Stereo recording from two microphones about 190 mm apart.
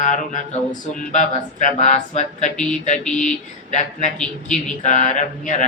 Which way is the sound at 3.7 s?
40° left (ahead or behind).